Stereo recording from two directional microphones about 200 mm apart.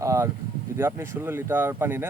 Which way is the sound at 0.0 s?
15° right (ahead or behind).